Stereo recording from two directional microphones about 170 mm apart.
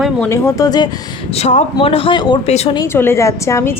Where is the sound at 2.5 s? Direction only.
40° left (ahead or behind).